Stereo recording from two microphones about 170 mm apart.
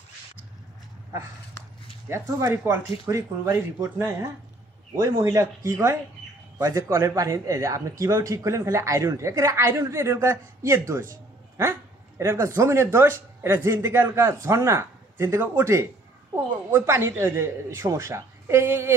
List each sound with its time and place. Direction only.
2.0 s a woman's voice: 15° right (ahead or behind)